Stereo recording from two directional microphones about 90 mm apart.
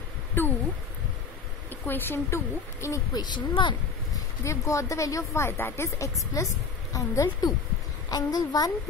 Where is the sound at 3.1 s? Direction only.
55° left (ahead or behind).